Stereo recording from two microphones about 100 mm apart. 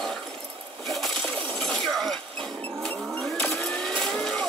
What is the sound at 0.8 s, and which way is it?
Coin, 5° left (ahead or behind).